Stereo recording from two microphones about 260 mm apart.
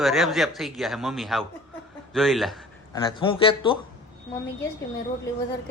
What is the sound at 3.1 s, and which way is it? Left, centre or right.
Speech, centre.